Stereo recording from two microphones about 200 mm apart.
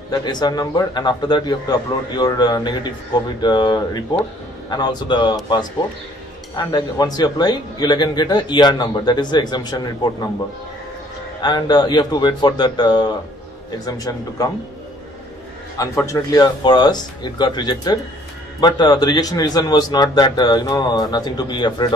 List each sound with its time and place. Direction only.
0.1 s speech: 20° left (ahead or behind)
11.4 s speech: 20° left (ahead or behind)
16.0 s speech: 15° left (ahead or behind)